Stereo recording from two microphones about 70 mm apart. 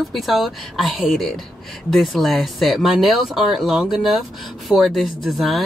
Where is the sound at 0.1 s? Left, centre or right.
Centre.